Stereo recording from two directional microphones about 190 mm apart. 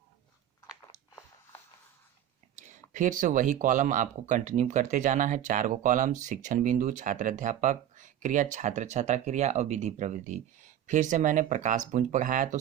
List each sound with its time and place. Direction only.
2.6 s speech: 40° right (ahead or behind)